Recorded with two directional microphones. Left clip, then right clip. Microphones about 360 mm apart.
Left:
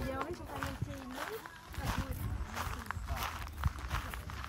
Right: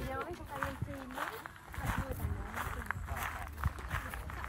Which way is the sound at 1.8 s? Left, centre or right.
Centre.